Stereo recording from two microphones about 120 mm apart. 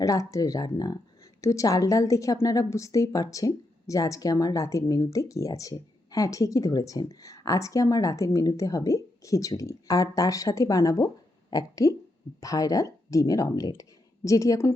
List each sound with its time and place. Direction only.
0.0 s a woman's voice: 30° left (ahead or behind)